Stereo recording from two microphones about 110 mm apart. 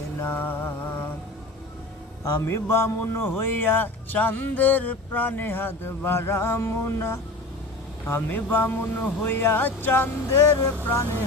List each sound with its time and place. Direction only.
0.2 s mantra: 20° left (ahead or behind)
2.4 s speech: 25° left (ahead or behind)